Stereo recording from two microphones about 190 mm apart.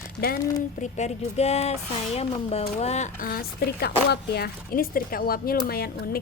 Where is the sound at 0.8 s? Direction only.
35° left (ahead or behind).